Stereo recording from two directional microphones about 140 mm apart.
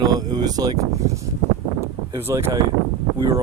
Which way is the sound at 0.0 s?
30° right (ahead or behind).